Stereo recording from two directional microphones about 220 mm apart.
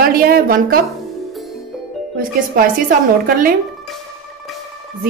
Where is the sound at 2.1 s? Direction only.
40° right (ahead or behind).